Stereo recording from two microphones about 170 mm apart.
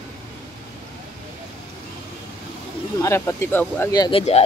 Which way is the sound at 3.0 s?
15° left (ahead or behind).